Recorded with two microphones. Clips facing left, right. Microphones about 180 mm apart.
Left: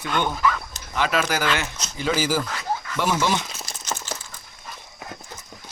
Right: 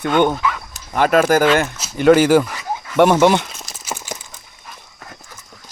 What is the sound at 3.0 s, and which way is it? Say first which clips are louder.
Speech: right 12 dB; 60° right (ahead or behind).